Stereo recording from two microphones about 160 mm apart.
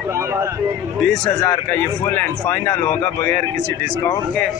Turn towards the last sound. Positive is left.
turn(degrees=15)  # may be behind; listen again after turning